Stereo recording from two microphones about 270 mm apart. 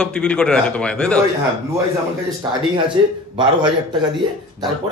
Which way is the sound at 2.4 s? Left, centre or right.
Centre.